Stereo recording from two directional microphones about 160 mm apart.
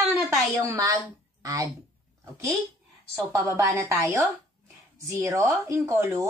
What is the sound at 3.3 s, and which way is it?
A woman's voice, 15° right (ahead or behind).